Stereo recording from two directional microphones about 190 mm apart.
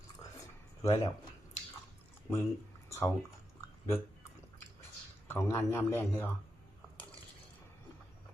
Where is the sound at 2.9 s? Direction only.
15° left (ahead or behind).